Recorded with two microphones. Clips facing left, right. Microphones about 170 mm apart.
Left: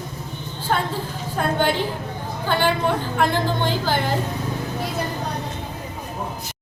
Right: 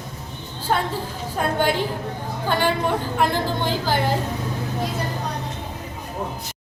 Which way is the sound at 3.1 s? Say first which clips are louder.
Left 1 dB; 10° right (ahead or behind).